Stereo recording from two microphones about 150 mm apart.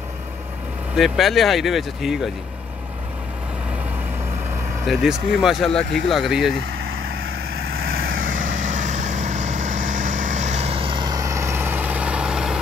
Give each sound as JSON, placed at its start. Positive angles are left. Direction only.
{"t": 0.9, "sound": "speech", "side_deg": 0}
{"t": 4.8, "sound": "speech", "side_deg": -5}
{"t": 8.1, "sound": "vehicle", "side_deg": -65}